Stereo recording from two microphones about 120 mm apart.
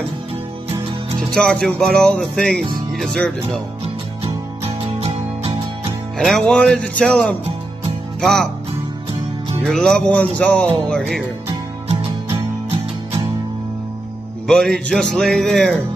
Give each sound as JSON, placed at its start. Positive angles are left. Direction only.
{"t": 1.3, "sound": "speech", "side_deg": 5}
{"t": 5.0, "sound": "music", "side_deg": -55}
{"t": 6.1, "sound": "speech", "side_deg": 5}
{"t": 9.7, "sound": "speech", "side_deg": 5}
{"t": 11.4, "sound": "music", "side_deg": -55}
{"t": 14.5, "sound": "music", "side_deg": 5}